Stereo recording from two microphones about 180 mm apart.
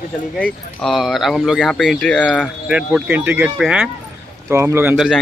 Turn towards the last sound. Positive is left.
turn(degrees=-5)  # may be behind; listen again after turning